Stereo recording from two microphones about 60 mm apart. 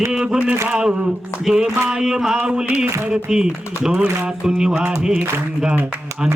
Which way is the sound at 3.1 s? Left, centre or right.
Centre.